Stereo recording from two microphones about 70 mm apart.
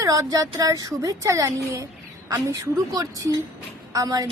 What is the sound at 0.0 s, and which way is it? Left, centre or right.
Speech, right.